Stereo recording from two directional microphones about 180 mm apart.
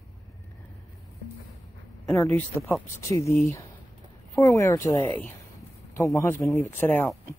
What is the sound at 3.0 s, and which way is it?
Speech, 15° left (ahead or behind).